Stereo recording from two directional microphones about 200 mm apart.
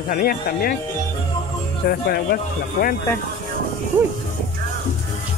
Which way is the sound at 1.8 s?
55° left (ahead or behind).